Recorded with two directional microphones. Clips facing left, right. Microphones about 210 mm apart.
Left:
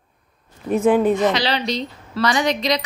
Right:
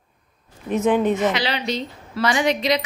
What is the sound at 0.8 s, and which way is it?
Speech, 5° left (ahead or behind).